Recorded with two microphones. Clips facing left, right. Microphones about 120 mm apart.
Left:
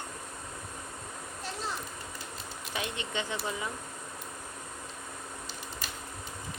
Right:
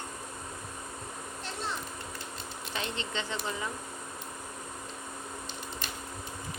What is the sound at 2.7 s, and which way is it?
Speech, 10° left (ahead or behind).